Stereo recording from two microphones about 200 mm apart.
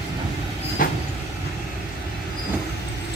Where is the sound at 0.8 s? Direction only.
45° left (ahead or behind).